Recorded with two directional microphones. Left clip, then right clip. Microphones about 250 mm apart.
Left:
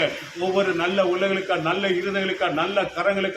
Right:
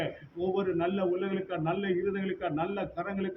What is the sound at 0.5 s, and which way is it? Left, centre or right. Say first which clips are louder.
A man's voice: left 10 dB; left.